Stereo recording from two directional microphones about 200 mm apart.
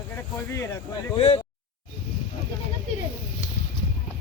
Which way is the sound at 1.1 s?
30° left (ahead or behind).